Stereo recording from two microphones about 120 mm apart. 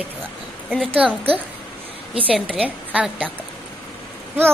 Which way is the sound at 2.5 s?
10° right (ahead or behind).